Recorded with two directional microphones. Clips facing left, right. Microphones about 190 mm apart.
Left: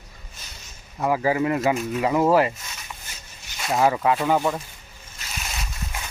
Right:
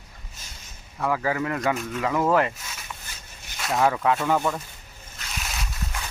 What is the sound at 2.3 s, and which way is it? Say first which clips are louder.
Speech: left 2 dB; 5° left (ahead or behind).